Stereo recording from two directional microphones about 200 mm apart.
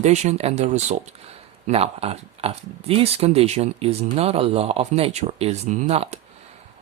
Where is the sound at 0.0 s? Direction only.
35° right (ahead or behind).